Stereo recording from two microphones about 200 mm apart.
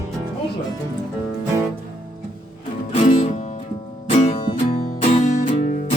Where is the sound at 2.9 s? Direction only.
35° left (ahead or behind).